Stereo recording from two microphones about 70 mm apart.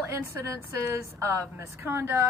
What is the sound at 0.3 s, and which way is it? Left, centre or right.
A woman's voice, right.